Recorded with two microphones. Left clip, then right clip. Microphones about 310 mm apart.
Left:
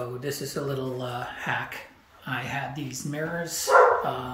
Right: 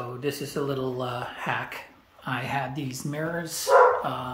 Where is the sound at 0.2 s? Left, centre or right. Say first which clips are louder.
Right 2 dB; centre.